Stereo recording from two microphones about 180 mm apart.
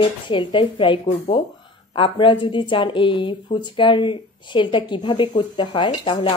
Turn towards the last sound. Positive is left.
turn(degrees=25)  # may be behind; listen again after turning